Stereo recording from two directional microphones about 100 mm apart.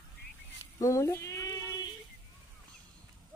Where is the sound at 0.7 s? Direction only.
35° left (ahead or behind).